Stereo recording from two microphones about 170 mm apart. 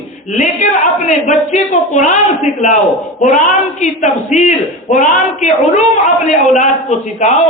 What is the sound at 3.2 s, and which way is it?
Speech, centre (ahead or behind).